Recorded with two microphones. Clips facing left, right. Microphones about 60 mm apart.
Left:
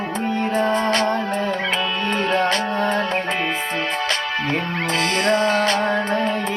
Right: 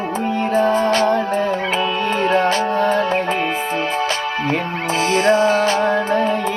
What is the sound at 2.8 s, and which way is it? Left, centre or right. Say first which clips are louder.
Music: right 4 dB; left.